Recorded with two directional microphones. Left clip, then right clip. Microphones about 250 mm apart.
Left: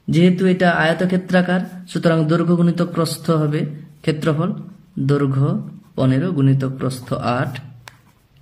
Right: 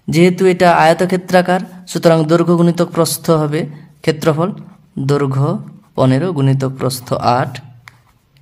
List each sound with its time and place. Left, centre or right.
0.1 s speech: right